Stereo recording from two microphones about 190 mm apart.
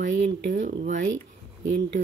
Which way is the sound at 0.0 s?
40° right (ahead or behind).